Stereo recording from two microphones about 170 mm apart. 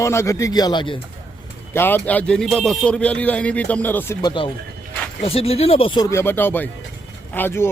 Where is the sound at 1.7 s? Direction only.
10° left (ahead or behind).